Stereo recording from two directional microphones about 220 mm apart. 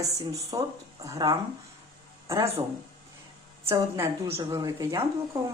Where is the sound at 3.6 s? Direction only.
10° right (ahead or behind).